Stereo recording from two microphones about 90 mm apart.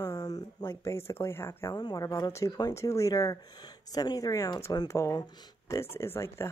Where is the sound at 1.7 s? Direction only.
40° left (ahead or behind).